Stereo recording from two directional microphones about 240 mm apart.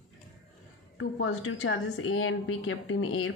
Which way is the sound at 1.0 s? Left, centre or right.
Left.